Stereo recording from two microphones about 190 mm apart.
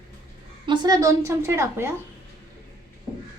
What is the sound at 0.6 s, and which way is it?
A woman's voice, 25° right (ahead or behind).